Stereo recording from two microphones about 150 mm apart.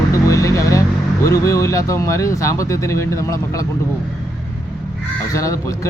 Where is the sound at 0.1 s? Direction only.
20° left (ahead or behind).